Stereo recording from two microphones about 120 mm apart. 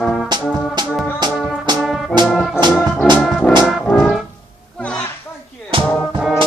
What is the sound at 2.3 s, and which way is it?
Organ, 5° left (ahead or behind).